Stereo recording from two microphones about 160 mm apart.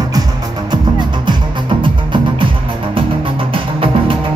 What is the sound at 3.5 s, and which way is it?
Music, 35° right (ahead or behind).